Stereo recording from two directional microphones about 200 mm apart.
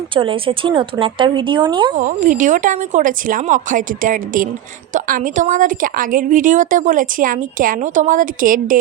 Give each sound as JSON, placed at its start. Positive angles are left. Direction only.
{"t": 0.1, "sound": "speech", "side_deg": -25}
{"t": 2.0, "sound": "a woman's voice", "side_deg": -40}